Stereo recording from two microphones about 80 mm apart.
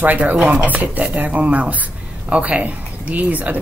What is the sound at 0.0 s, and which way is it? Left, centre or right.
Speech, right.